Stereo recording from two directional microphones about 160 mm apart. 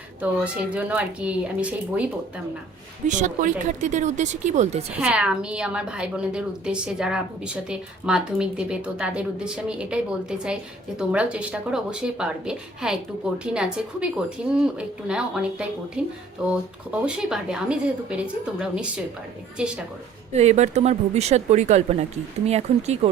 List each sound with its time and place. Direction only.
0.2 s speech: 10° right (ahead or behind)
3.1 s speech: 50° right (ahead or behind)
4.9 s a woman's voice: 5° right (ahead or behind)
20.3 s speech: 45° right (ahead or behind)